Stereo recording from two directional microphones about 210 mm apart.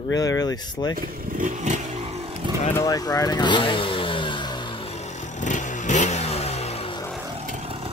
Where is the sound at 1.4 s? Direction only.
35° right (ahead or behind).